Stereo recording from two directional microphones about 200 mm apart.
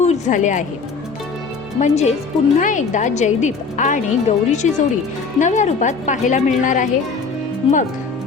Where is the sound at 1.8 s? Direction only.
35° left (ahead or behind).